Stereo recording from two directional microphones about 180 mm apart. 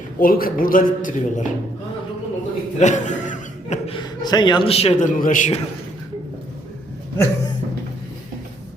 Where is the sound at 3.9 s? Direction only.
25° left (ahead or behind); by 5.6 s 45° left (ahead or behind).